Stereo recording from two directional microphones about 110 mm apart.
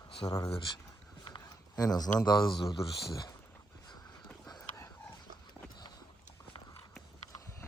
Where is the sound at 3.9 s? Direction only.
40° left (ahead or behind).